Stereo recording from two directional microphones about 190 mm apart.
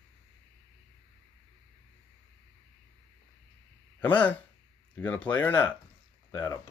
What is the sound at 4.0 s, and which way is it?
Speech, 10° left (ahead or behind).